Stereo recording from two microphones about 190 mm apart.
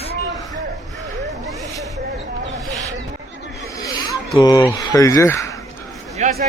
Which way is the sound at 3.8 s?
20° left (ahead or behind).